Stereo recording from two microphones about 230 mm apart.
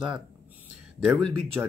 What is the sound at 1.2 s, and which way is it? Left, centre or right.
Speech, right.